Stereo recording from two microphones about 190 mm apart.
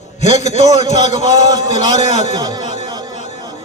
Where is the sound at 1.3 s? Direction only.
20° right (ahead or behind).